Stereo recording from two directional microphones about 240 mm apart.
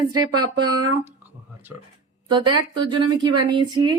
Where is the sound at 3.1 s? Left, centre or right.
Centre.